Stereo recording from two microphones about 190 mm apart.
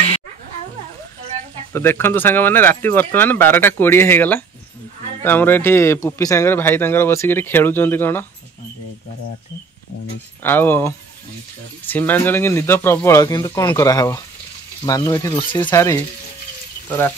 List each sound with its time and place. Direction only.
1.7 s speech: 10° left (ahead or behind)
10.4 s speech: 10° left (ahead or behind)